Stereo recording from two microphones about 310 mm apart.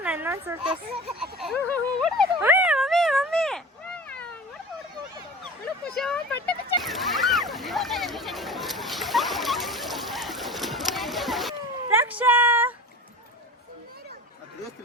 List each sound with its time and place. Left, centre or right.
0.0 s children playing: centre
1.2 s speech: centre
2.3 s cat: centre
6.0 s splash: centre